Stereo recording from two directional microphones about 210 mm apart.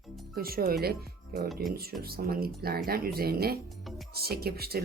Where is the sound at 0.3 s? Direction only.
45° right (ahead or behind).